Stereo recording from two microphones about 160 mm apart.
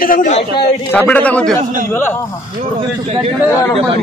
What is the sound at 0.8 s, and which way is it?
A man's voice, 10° left (ahead or behind).